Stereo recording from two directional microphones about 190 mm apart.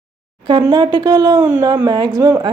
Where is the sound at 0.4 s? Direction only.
25° right (ahead or behind).